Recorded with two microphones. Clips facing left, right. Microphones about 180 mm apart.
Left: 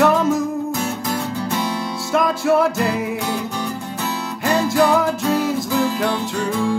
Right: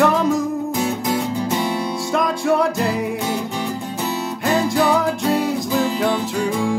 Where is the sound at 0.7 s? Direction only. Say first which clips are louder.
Right 3 dB; 15° right (ahead or behind).